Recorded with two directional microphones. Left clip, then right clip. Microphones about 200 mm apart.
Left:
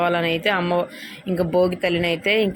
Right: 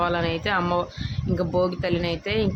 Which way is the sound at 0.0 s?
Centre (ahead or behind).